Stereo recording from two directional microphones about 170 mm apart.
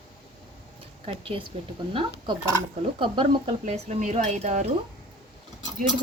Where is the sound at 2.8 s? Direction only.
35° right (ahead or behind).